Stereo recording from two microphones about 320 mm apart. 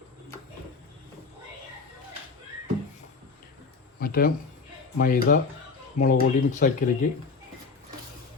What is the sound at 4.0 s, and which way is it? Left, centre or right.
Speech, left.